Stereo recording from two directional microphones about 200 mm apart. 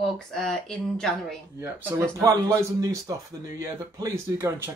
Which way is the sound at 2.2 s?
15° right (ahead or behind).